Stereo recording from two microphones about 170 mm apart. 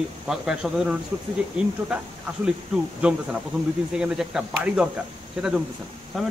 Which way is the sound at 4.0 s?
5° right (ahead or behind).